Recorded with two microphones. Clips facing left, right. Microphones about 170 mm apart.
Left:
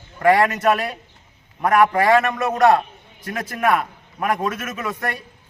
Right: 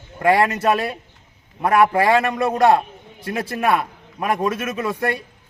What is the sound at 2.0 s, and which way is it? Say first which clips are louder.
A man's voice: even; 30° right (ahead or behind).